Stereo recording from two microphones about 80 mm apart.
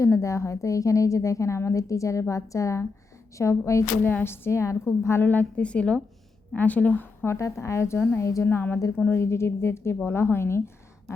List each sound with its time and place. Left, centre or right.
0.0 s a woman's voice: left
4.0 s a woman's voice: left
5.2 s a woman's voice: left
7.3 s a woman's voice: left
8.4 s a woman's voice: left